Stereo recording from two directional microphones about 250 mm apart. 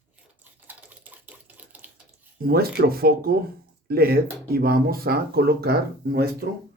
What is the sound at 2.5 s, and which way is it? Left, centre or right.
Speech, right.